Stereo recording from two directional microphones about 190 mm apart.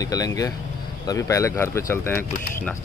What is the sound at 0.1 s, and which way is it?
Speech, 20° left (ahead or behind).